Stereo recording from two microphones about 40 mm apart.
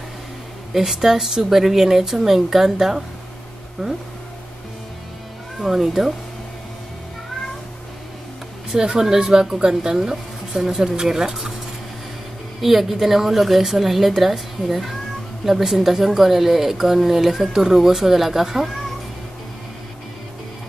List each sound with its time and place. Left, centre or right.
0.7 s a woman's voice: centre
5.6 s speech: centre
8.7 s speech: centre
12.5 s a woman's voice: centre